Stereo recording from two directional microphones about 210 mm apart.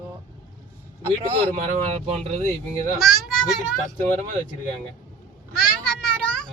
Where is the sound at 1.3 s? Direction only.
25° right (ahead or behind).